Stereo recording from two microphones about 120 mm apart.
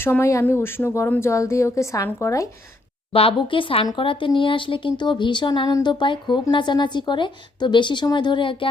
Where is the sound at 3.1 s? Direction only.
50° left (ahead or behind).